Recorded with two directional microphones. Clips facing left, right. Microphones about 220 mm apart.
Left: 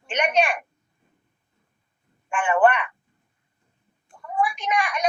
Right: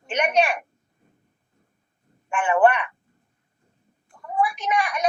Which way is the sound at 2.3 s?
5° right (ahead or behind).